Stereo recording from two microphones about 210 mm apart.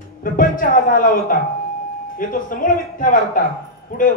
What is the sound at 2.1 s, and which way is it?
A man's voice, 40° left (ahead or behind).